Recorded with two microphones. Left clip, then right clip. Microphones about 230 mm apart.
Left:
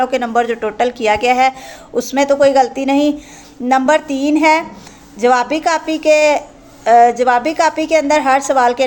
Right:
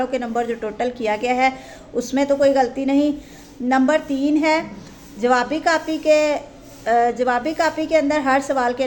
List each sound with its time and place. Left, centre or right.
0.0 s a woman's voice: centre